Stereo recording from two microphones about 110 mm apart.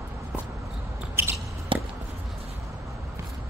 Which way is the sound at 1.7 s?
50° right (ahead or behind).